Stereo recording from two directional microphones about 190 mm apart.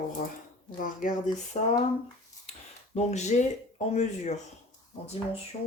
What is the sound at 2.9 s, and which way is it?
Speech, 35° left (ahead or behind).